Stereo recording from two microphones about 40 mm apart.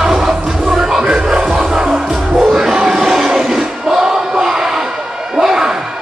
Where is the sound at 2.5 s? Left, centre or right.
Centre.